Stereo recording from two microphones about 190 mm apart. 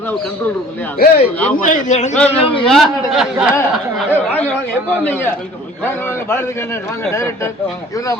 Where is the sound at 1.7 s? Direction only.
40° left (ahead or behind).